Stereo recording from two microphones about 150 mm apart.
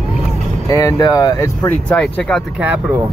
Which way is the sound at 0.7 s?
20° left (ahead or behind).